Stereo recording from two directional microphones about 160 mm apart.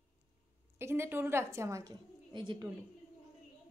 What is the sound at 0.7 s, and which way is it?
A woman's voice, 15° right (ahead or behind).